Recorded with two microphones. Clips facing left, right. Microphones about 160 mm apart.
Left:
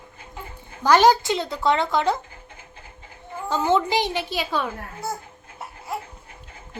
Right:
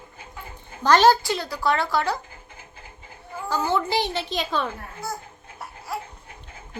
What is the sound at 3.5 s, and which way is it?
A child's voice, 20° left (ahead or behind).